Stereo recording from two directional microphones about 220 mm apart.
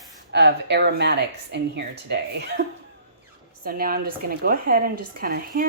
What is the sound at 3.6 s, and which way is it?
Speech, 40° right (ahead or behind).